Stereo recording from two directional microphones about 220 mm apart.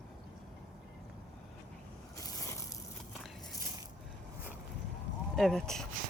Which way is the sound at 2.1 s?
15° left (ahead or behind).